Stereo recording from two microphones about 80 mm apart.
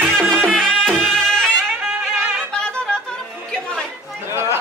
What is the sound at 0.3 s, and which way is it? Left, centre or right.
Music, centre.